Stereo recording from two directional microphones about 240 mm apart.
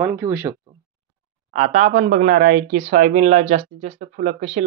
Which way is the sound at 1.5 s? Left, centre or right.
Right.